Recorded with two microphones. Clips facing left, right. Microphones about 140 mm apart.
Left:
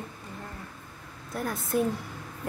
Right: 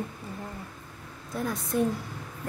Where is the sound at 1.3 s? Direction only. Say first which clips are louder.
Even; centre (ahead or behind).